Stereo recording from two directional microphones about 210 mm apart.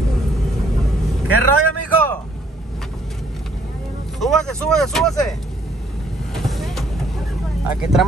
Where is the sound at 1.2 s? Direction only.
90° right.